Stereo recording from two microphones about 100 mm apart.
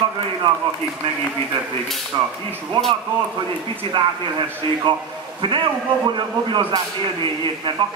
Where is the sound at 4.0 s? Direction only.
60° right (ahead or behind).